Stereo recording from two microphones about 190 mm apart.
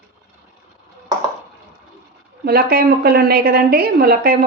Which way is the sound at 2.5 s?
50° right (ahead or behind).